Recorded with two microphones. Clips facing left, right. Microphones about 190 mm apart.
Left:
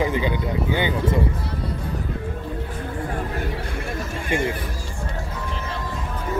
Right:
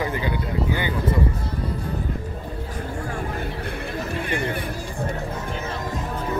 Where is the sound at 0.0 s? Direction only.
20° left (ahead or behind).